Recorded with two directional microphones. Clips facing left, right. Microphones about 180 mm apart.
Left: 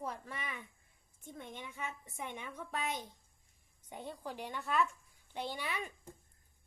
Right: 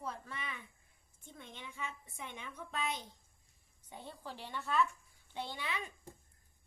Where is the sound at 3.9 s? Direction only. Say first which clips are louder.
Left 4 dB; 15° left (ahead or behind).